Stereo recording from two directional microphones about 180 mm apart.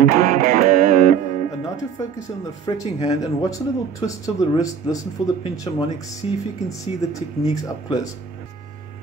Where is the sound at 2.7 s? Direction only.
25° left (ahead or behind).